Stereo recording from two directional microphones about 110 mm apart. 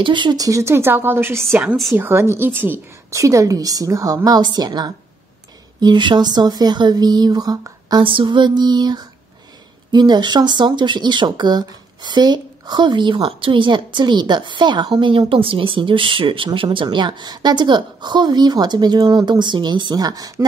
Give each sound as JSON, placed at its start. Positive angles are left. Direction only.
{"t": 0.0, "sound": "speech", "side_deg": -45}
{"t": 0.5, "sound": "a woman's voice", "side_deg": -25}
{"t": 8.0, "sound": "a woman's voice", "side_deg": -50}